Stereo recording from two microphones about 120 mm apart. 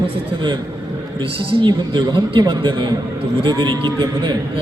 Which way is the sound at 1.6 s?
40° right (ahead or behind).